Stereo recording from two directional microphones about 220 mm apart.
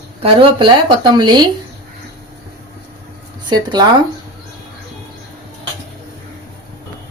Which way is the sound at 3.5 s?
20° right (ahead or behind).